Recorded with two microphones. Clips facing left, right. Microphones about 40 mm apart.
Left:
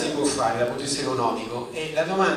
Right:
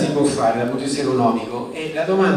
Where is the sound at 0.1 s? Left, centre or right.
Right.